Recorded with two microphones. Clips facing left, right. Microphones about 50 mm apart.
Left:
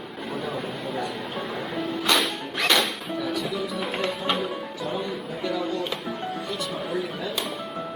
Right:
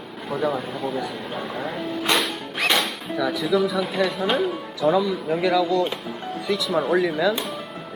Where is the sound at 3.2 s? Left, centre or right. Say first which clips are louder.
Right 8 dB; right.